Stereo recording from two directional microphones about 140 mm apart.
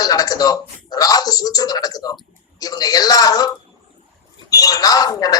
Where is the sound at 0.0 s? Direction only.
25° left (ahead or behind).